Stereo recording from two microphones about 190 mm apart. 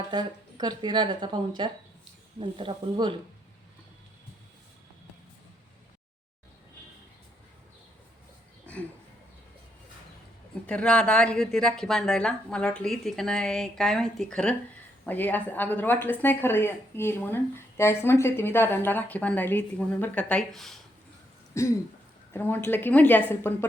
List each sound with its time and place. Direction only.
0.1 s speech: 20° right (ahead or behind)
8.7 s a sound: 10° left (ahead or behind)
10.7 s a woman's voice: 5° left (ahead or behind)
21.5 s a woman's voice: 15° left (ahead or behind)